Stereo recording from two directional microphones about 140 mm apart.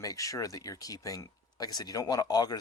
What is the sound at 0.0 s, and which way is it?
Speech, 25° left (ahead or behind).